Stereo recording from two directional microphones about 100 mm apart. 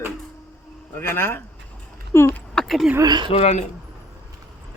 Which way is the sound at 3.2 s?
85° left.